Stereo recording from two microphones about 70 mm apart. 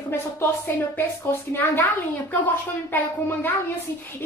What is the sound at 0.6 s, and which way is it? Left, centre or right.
A woman's voice, left.